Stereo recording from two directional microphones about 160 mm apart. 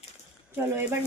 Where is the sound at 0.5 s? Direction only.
15° right (ahead or behind).